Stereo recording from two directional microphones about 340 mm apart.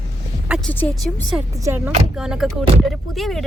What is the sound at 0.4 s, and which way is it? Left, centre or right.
Speech, centre.